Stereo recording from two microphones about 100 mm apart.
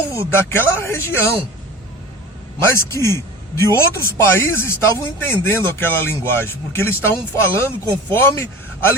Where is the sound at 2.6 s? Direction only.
30° left (ahead or behind).